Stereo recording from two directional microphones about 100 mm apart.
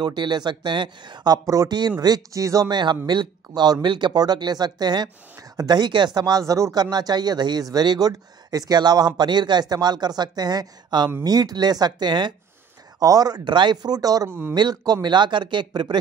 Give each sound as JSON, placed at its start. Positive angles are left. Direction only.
{"t": 0.0, "sound": "speech", "side_deg": -45}
{"t": 13.0, "sound": "speech", "side_deg": -40}